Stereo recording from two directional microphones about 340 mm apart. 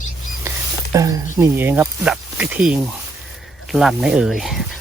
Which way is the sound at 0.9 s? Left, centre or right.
Centre.